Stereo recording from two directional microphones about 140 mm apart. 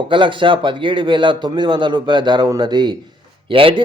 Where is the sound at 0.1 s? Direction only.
35° right (ahead or behind).